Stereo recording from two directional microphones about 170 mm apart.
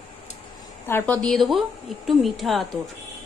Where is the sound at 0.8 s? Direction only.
10° left (ahead or behind).